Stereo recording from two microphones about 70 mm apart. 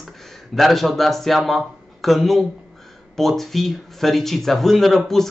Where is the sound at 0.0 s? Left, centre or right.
Centre.